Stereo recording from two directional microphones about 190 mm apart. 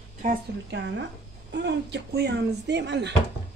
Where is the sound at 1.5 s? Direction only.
65° right (ahead or behind).